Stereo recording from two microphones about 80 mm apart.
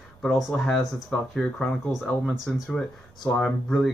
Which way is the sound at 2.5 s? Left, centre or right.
Centre.